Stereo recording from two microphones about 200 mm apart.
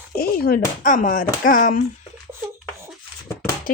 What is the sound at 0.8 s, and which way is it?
Speech, 40° left (ahead or behind).